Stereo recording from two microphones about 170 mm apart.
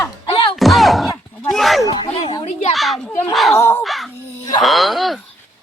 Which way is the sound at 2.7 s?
Centre (ahead or behind).